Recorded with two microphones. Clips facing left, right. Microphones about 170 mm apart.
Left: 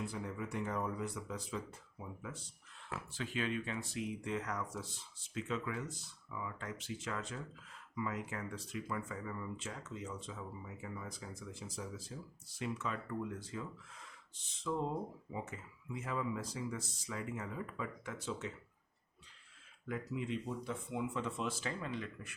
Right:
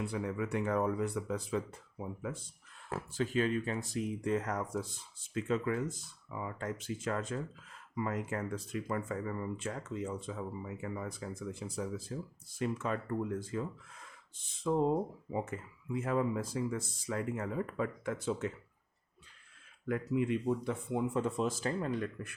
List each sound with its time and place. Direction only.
0.0 s speech: 65° right (ahead or behind)
2.9 s speech: 40° right (ahead or behind)
19.9 s speech: 55° right (ahead or behind)